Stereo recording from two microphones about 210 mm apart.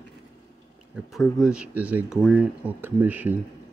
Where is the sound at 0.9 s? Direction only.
Centre (ahead or behind).